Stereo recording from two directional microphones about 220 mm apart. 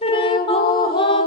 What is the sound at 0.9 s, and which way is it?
Chant, 25° left (ahead or behind).